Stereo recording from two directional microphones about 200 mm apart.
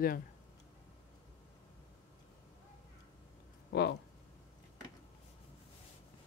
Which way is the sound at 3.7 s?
55° left (ahead or behind).